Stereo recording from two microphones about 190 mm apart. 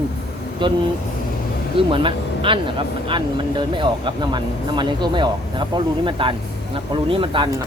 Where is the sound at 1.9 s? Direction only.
25° right (ahead or behind).